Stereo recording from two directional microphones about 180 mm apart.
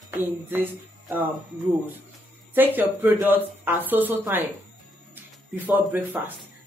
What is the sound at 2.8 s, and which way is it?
Speech, 10° right (ahead or behind).